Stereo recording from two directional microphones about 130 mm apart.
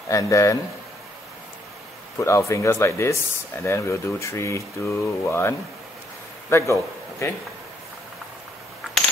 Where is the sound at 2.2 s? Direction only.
25° left (ahead or behind).